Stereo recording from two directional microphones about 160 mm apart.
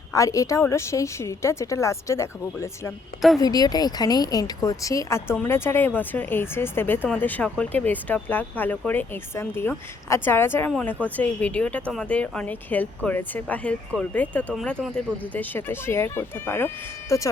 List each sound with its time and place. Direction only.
0.1 s a woman's voice: 20° left (ahead or behind)
10.7 s a woman's voice: 5° left (ahead or behind)